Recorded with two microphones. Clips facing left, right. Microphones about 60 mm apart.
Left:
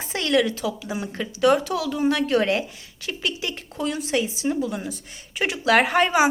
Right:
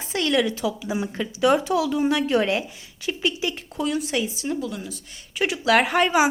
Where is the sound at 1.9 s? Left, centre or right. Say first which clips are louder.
Even; centre.